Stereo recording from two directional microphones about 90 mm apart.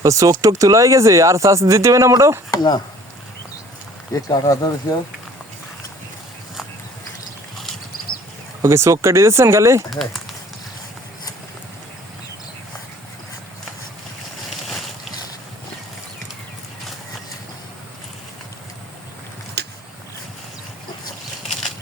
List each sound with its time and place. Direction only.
0.0 s speech: 35° right (ahead or behind)
2.5 s speech: 50° left (ahead or behind)
4.1 s speech: 45° left (ahead or behind)
8.6 s speech: 30° right (ahead or behind)
9.9 s speech: centre (ahead or behind)
21.4 s a sound: centre (ahead or behind)